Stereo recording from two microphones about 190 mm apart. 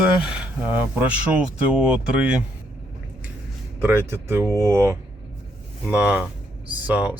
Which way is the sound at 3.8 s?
10° right (ahead or behind).